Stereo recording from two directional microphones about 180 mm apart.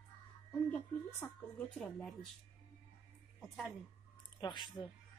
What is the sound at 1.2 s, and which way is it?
Speech, 15° left (ahead or behind).